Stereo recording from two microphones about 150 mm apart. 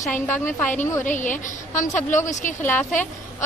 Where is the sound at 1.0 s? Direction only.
60° left (ahead or behind).